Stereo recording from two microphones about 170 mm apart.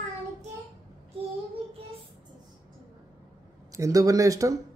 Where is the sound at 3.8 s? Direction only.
20° right (ahead or behind).